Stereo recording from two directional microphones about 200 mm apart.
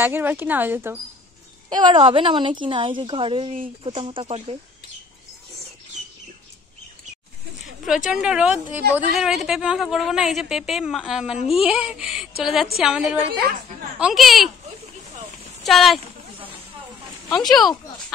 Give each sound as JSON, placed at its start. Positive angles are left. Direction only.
{"t": 0.0, "sound": "speech", "side_deg": -10}
{"t": 1.7, "sound": "a woman's voice", "side_deg": -25}
{"t": 7.8, "sound": "a woman's voice", "side_deg": -5}
{"t": 15.6, "sound": "speech", "side_deg": 0}
{"t": 17.3, "sound": "a woman's voice", "side_deg": 0}